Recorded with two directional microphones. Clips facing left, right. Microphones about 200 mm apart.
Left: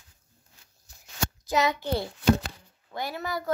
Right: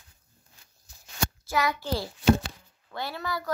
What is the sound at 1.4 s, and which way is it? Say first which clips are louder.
Speech: left 3 dB; 20° left (ahead or behind).